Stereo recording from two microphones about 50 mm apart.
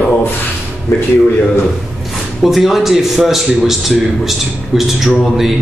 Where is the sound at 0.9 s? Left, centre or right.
Left.